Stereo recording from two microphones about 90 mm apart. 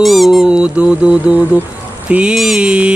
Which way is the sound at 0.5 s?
10° right (ahead or behind).